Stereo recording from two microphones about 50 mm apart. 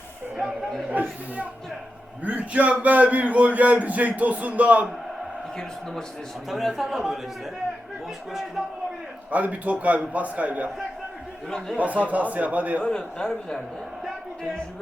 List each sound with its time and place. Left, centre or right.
0.3 s a man's voice: centre
0.9 s speech: right
5.5 s a man's voice: centre
6.5 s a man's voice: centre
8.3 s a man's voice: centre
9.3 s speech: right
11.8 s speech: right
12.9 s a man's voice: centre